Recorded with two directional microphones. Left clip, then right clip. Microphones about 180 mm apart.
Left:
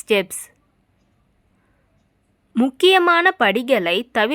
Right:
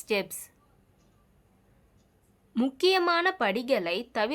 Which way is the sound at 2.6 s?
35° left (ahead or behind).